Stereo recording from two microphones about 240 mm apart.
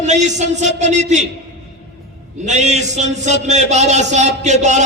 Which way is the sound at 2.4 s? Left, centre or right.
Right.